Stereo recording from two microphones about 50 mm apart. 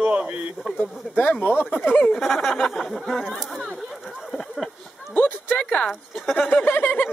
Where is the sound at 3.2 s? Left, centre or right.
Centre.